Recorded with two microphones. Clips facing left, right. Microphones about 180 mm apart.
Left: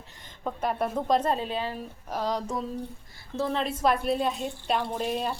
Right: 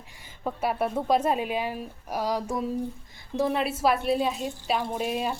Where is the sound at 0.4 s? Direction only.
5° right (ahead or behind).